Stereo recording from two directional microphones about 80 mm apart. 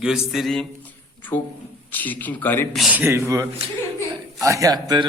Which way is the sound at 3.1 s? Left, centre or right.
Right.